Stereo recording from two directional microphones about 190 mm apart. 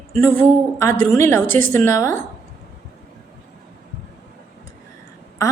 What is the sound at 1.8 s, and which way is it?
Speech, 15° left (ahead or behind).